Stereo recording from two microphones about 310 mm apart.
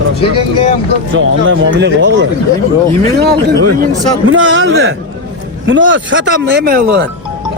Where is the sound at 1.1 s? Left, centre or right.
Right.